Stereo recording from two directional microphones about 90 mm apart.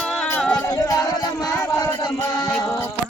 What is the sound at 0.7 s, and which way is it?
Music, 40° left (ahead or behind).